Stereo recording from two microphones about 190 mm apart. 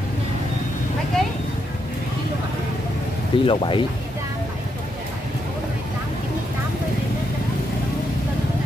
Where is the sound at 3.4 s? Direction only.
25° left (ahead or behind).